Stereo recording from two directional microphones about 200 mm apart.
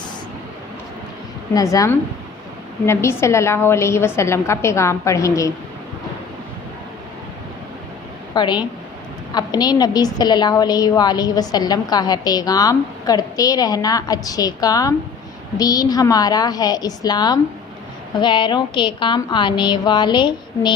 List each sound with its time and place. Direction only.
1.5 s a woman's voice: 15° left (ahead or behind)
8.4 s a woman's voice: 20° left (ahead or behind)